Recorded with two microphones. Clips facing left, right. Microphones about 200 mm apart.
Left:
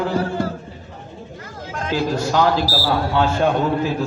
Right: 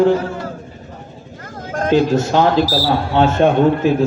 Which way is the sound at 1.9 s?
25° right (ahead or behind).